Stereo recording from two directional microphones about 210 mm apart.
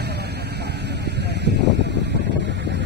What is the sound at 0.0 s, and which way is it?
Vehicle, 50° right (ahead or behind).